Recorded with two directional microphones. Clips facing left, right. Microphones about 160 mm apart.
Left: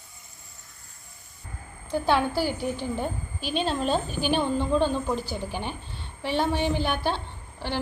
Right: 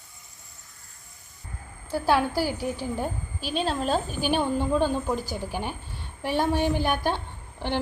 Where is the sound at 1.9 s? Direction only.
10° right (ahead or behind).